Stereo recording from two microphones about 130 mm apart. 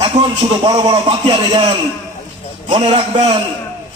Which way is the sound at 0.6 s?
35° right (ahead or behind).